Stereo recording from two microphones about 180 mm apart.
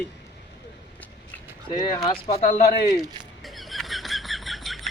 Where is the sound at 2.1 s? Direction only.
35° left (ahead or behind).